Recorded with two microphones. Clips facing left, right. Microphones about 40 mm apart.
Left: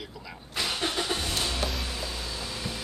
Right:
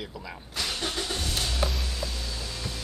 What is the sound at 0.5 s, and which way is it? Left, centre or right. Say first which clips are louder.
Vehicle: left 2 dB; centre.